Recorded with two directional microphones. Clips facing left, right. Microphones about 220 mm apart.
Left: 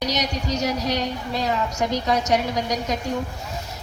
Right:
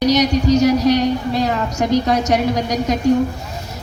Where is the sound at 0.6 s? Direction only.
70° right (ahead or behind).